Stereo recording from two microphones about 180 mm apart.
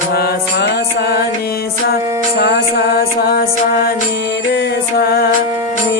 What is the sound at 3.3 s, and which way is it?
Music, 55° left (ahead or behind).